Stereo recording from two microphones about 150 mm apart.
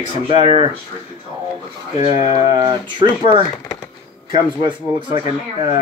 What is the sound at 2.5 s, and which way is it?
Speech, 30° right (ahead or behind).